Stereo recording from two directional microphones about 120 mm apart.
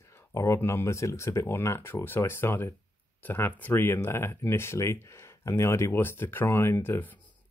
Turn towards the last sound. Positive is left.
turn(degrees=15)  # may be behind; listen again after turning